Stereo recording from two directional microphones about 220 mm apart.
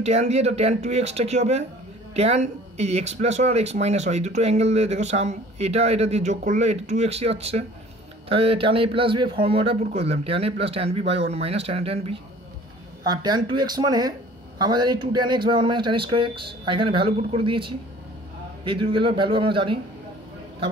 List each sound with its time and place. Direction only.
0.0 s speech: 30° right (ahead or behind)